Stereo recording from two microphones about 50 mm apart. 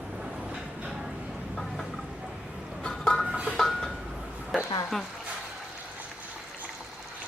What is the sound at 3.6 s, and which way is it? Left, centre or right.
Chink, centre.